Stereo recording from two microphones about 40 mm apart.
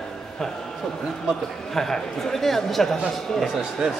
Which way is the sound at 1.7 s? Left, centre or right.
Centre.